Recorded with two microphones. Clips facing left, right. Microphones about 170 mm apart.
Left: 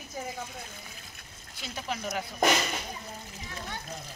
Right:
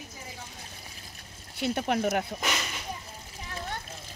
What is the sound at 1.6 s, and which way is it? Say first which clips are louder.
Speech: right 9 dB; 60° right (ahead or behind).